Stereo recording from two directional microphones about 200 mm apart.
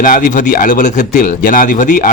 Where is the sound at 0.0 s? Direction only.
40° left (ahead or behind).